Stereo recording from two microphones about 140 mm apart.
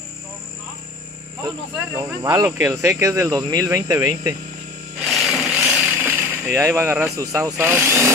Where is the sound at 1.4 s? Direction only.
30° right (ahead or behind).